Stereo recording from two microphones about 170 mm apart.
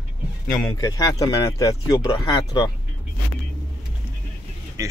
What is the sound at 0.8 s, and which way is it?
Speech, 20° left (ahead or behind).